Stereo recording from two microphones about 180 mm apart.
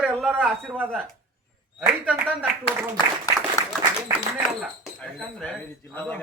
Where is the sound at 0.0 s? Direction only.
Centre (ahead or behind).